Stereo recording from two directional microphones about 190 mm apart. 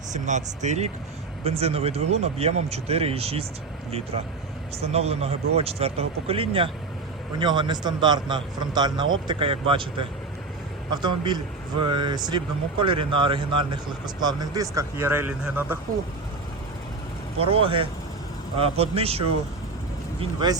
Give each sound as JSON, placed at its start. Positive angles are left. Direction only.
{"t": 0.1, "sound": "speech", "side_deg": -40}
{"t": 4.8, "sound": "speech", "side_deg": -35}
{"t": 17.4, "sound": "speech", "side_deg": -30}